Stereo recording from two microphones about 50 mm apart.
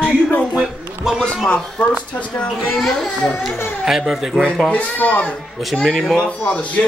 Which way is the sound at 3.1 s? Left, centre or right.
Left.